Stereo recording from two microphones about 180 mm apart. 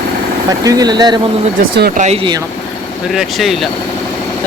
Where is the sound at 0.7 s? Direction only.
20° right (ahead or behind).